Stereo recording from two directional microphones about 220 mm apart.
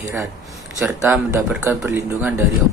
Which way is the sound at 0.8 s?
5° right (ahead or behind).